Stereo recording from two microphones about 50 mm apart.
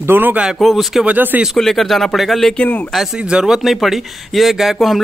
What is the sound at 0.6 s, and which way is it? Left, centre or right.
Speech, centre.